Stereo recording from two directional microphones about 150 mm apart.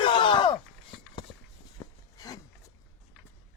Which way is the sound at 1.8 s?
20° left (ahead or behind).